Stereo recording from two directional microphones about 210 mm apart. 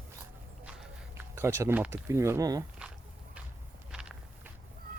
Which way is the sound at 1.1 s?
10° right (ahead or behind).